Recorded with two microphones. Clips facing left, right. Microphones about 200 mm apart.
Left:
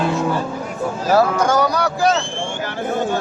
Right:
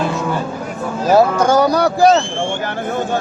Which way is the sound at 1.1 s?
30° right (ahead or behind).